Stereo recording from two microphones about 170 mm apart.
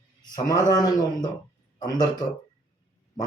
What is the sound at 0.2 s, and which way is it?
Speech, 20° left (ahead or behind).